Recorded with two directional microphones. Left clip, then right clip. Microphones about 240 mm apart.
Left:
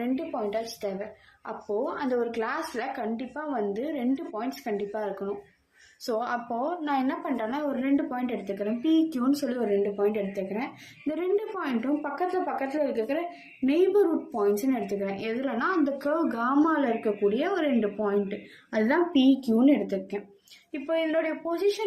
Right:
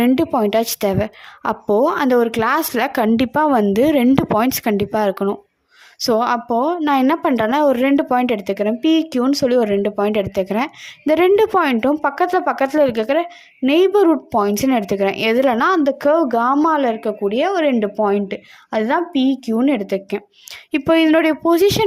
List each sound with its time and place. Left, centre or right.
0.0 s a woman's voice: right